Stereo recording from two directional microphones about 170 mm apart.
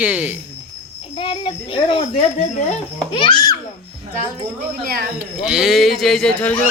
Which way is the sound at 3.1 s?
30° left (ahead or behind).